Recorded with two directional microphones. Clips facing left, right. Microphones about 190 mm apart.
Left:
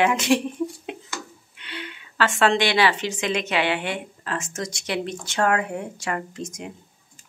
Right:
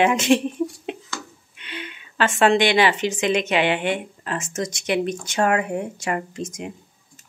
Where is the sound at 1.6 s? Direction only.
20° right (ahead or behind).